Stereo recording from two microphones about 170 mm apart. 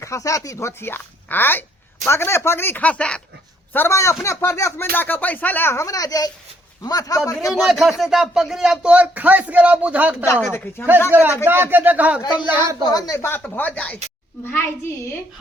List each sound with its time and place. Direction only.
0.0 s a man's voice: 20° left (ahead or behind)
7.5 s speech: centre (ahead or behind)
10.4 s a man's voice: 15° left (ahead or behind)
11.1 s speech: 10° right (ahead or behind)
12.9 s a man's voice: 20° left (ahead or behind)